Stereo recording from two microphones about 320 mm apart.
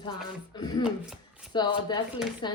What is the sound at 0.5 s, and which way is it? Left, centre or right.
Speech, centre.